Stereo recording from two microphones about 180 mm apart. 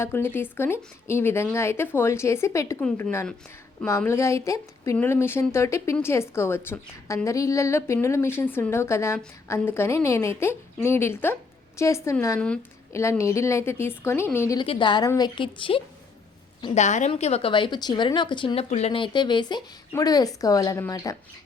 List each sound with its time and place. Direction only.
0.0 s speech: 10° left (ahead or behind)
14.6 s speech: 25° left (ahead or behind)
16.7 s a woman's voice: 40° left (ahead or behind); by 21.2 s 20° left (ahead or behind)